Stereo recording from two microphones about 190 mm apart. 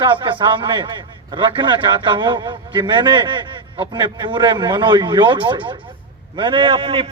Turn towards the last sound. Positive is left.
turn(degrees=-30)  # may be behind; listen again after turning